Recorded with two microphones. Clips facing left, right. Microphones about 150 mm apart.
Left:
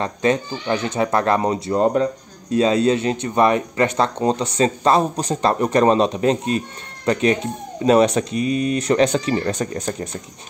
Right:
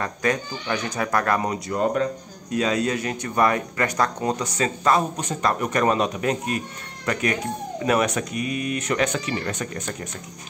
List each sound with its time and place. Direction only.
0.0 s speech: 25° left (ahead or behind)